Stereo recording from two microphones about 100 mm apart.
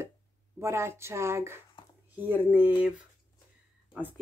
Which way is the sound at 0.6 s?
25° right (ahead or behind).